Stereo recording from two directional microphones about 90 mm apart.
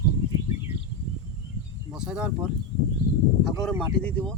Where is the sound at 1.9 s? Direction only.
10° right (ahead or behind).